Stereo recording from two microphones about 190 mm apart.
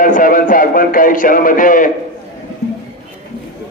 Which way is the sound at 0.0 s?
45° left (ahead or behind).